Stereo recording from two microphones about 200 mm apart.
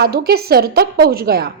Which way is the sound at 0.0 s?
50° right (ahead or behind).